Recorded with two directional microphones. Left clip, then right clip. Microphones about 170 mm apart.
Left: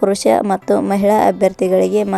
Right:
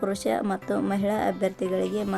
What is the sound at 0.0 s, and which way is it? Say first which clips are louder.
Speech: left 13 dB; 40° left (ahead or behind).